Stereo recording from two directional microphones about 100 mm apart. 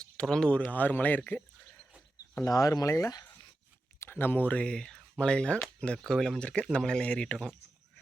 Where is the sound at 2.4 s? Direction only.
35° left (ahead or behind).